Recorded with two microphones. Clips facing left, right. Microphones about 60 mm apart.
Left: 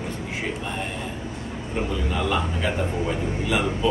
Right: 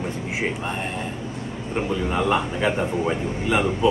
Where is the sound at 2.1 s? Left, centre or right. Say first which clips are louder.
Right 4 dB; right.